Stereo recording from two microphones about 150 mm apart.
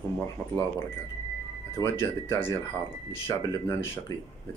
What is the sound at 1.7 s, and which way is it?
Speech, 20° left (ahead or behind).